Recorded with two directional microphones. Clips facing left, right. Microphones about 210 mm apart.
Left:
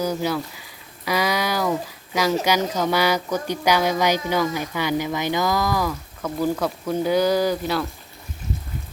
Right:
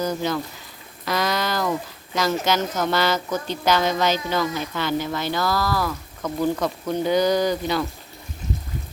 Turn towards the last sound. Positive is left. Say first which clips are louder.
# even
turn(degrees=5)  # may be behind; listen again after turning